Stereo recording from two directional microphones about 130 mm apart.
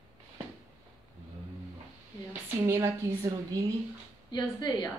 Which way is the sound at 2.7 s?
20° right (ahead or behind).